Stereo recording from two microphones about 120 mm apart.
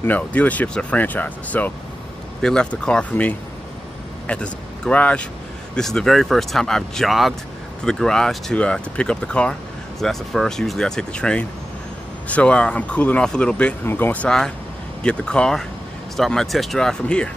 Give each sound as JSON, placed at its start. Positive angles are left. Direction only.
{"t": 0.0, "sound": "speech", "side_deg": 15}